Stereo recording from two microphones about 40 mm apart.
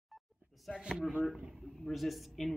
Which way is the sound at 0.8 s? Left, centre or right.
Centre.